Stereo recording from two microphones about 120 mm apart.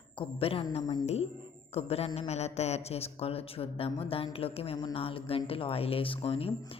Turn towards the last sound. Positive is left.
turn(degrees=50)  # may be behind; listen again after turning